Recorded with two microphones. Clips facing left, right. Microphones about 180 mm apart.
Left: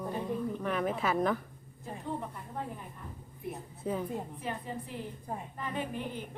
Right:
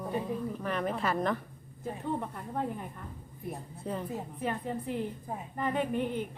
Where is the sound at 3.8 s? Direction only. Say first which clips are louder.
Left 2 dB; centre (ahead or behind).